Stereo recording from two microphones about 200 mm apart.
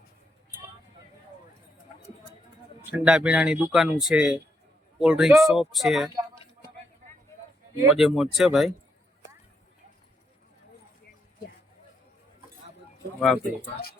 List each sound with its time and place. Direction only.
2.9 s speech: 5° right (ahead or behind)
7.9 s speech: centre (ahead or behind)
13.1 s speech: 5° left (ahead or behind)